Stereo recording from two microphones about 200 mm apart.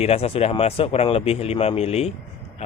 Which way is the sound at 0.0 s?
30° left (ahead or behind).